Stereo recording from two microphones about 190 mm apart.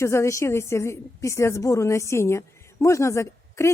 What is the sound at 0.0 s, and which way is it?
A woman's voice, 15° left (ahead or behind).